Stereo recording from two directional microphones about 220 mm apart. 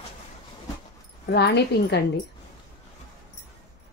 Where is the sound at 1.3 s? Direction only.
50° left (ahead or behind).